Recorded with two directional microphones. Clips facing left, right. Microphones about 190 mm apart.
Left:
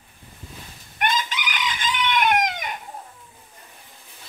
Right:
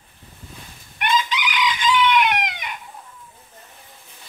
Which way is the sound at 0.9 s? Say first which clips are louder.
Right 3 dB; 45° left (ahead or behind).